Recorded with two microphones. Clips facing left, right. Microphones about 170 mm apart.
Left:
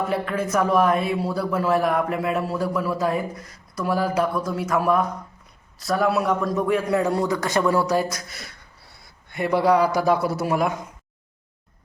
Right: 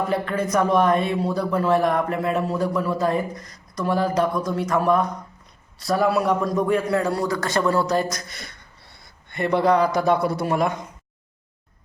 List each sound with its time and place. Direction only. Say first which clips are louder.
0.0 s speech: right 1 dB; 5° left (ahead or behind)
6.9 s speech: left 1 dB; 15° left (ahead or behind)